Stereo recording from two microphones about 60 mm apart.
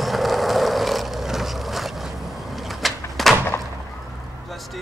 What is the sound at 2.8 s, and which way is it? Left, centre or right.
Door, centre.